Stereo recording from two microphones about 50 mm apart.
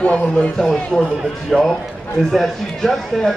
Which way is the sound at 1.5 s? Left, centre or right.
Centre.